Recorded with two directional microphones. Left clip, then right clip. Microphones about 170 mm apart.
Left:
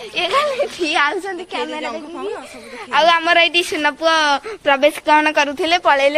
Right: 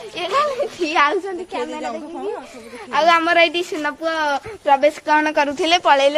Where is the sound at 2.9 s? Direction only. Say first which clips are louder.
Left 2 dB; centre (ahead or behind).